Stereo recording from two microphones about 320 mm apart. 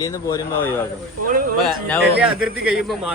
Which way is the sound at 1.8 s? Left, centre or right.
Centre.